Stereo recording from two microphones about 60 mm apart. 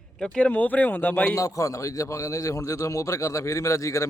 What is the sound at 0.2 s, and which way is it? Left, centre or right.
Speech, centre.